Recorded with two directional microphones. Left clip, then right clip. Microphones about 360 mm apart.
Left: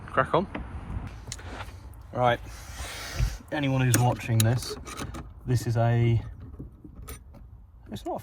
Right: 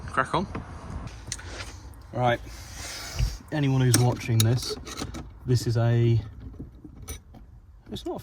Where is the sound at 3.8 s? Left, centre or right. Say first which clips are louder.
Right 1 dB; left.